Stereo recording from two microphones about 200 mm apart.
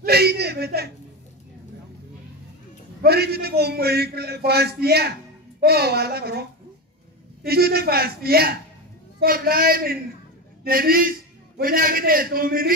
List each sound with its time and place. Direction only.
0.0 s speech: 50° right (ahead or behind)
3.0 s a man's voice: 50° right (ahead or behind)
7.4 s a man's voice: 50° right (ahead or behind)